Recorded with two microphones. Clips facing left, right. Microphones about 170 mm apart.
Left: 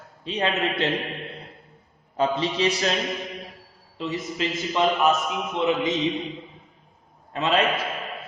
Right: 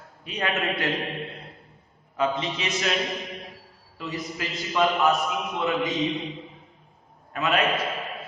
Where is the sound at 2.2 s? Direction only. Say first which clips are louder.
Left 3 dB; 35° left (ahead or behind).